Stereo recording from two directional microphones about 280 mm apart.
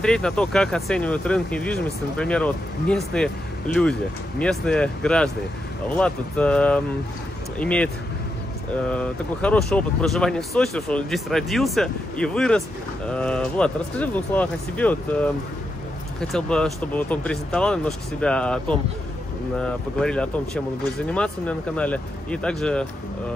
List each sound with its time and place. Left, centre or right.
0.0 s speech: centre
8.9 s speech: centre